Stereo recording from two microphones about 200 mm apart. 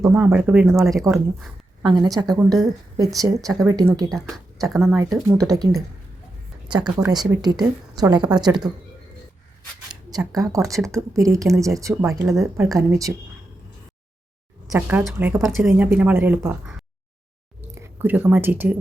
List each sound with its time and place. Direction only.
0.1 s a woman's voice: 5° right (ahead or behind)
10.1 s speech: 20° right (ahead or behind)
14.7 s speech: 10° right (ahead or behind)
17.7 s speech: 10° right (ahead or behind)